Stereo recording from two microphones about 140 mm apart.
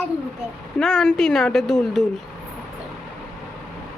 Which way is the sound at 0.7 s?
5° left (ahead or behind).